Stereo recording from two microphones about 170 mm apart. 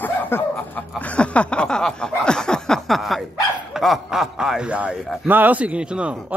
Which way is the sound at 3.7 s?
Centre (ahead or behind).